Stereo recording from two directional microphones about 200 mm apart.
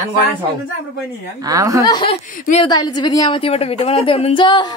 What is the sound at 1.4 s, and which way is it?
Speech, 15° right (ahead or behind).